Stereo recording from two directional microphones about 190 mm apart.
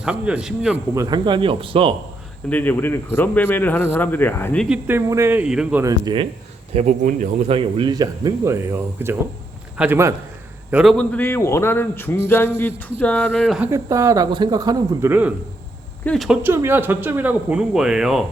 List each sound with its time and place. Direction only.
0.0 s speech: 5° right (ahead or behind)
0.9 s speech: 20° right (ahead or behind)
2.5 s speech: 10° left (ahead or behind)
4.7 s speech: 10° right (ahead or behind)
5.8 s speech: 20° right (ahead or behind)
6.7 s a man's voice: 40° right (ahead or behind); by 10.9 s 5° right (ahead or behind)
10.9 s speech: 10° left (ahead or behind)
13.6 s speech: 15° right (ahead or behind)
16.0 s speech: centre (ahead or behind)
16.4 s speech: 10° right (ahead or behind)